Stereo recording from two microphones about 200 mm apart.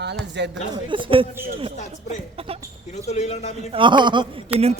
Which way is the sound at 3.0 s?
35° left (ahead or behind).